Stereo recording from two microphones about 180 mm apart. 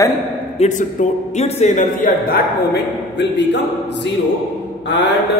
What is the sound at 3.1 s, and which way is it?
Speech, 70° left (ahead or behind).